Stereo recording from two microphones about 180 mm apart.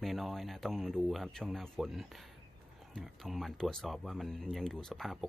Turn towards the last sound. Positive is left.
turn(degrees=0)  # may be behind; listen again after turning